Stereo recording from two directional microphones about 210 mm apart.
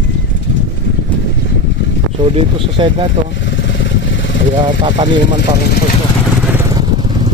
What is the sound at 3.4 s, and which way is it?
Vehicle, 60° left (ahead or behind).